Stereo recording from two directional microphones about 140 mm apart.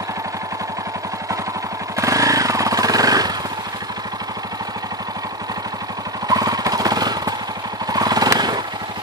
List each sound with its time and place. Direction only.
2.0 s vehicle: 25° right (ahead or behind)
6.2 s jackhammer: 25° right (ahead or behind)
7.8 s vehicle: 30° right (ahead or behind)